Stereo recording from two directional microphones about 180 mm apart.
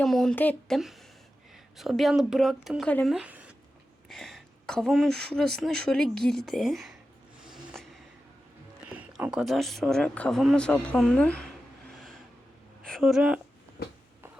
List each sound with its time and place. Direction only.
0.0 s speech: centre (ahead or behind)
7.4 s a sound: centre (ahead or behind)
8.9 s speech: 10° right (ahead or behind)
12.8 s speech: centre (ahead or behind)